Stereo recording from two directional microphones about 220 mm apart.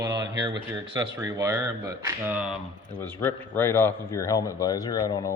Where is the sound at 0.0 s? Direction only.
15° right (ahead or behind).